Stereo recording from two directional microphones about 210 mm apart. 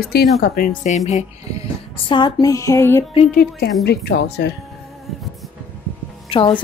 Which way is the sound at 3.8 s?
50° left (ahead or behind).